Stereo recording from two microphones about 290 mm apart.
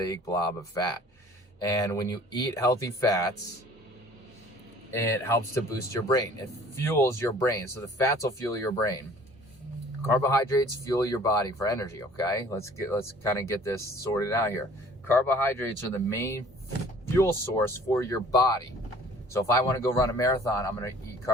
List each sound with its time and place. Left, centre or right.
0.0 s speech: centre
4.9 s speech: centre
6.8 s speech: centre
10.1 s speech: centre